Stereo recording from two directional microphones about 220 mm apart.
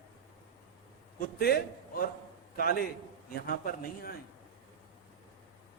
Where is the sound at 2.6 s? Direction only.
40° left (ahead or behind).